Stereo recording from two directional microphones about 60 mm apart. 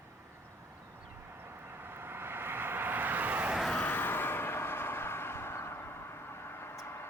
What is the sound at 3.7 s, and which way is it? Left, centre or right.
Vehicle, left.